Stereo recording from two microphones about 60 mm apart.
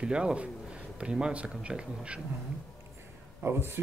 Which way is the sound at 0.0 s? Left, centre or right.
Centre.